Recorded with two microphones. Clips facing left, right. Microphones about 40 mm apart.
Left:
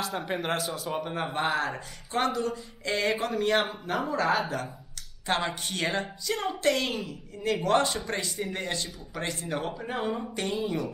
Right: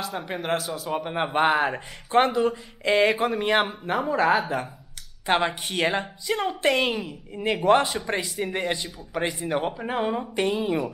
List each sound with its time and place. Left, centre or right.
0.0 s speech: centre
1.0 s a woman's voice: right; by 10.6 s centre
10.6 s speech: right